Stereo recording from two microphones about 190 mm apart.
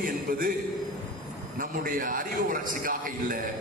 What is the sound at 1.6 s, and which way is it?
A man's voice, 45° right (ahead or behind).